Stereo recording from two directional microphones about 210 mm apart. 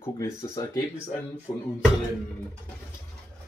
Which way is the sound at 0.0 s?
15° left (ahead or behind).